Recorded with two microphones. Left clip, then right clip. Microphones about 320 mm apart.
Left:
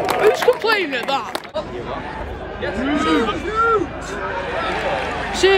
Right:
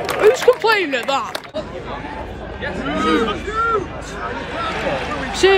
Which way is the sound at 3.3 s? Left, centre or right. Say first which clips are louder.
Left 2 dB; centre.